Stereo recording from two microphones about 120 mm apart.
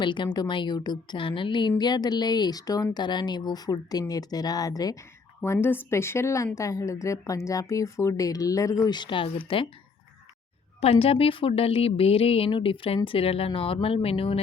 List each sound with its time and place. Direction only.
0.0 s speech: 40° left (ahead or behind)
5.4 s a woman's voice: 20° left (ahead or behind); by 9.6 s 45° left (ahead or behind)
10.8 s a woman's voice: 55° left (ahead or behind)